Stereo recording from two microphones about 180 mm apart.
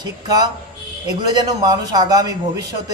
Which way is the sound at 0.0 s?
20° right (ahead or behind).